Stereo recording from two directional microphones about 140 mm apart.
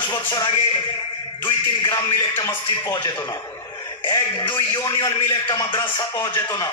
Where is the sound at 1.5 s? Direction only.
25° left (ahead or behind).